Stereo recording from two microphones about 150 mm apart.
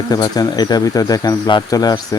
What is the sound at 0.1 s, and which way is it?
Speech, 25° left (ahead or behind).